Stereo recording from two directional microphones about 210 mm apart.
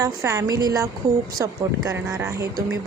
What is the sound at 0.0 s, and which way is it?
Speech, 15° right (ahead or behind).